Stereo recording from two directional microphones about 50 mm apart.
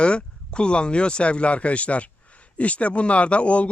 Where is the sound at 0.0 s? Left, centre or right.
Left.